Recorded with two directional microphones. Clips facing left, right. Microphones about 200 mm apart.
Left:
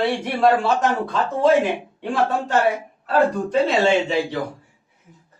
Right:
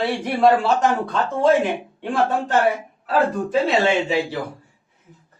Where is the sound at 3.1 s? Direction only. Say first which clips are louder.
Left 1 dB; centre (ahead or behind).